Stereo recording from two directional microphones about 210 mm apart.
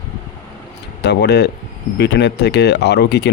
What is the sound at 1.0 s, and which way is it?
Speech, 55° left (ahead or behind).